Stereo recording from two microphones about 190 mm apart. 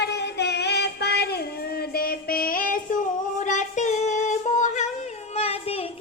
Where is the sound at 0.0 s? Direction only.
60° left (ahead or behind).